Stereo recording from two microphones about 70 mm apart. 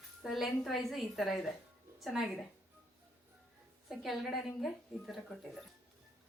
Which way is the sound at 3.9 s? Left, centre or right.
Centre.